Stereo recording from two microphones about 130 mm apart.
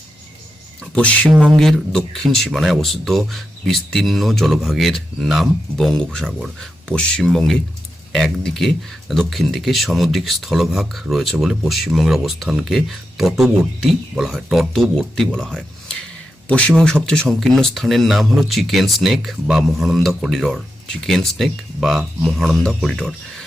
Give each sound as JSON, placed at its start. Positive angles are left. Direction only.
{"t": 0.9, "sound": "speech", "side_deg": 5}